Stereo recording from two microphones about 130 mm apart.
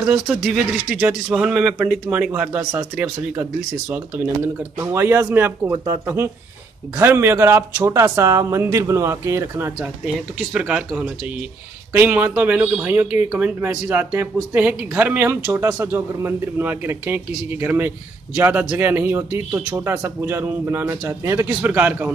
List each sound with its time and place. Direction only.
0.0 s speech: 10° right (ahead or behind)
4.7 s speech: 20° right (ahead or behind)
10.5 s speech: 5° right (ahead or behind)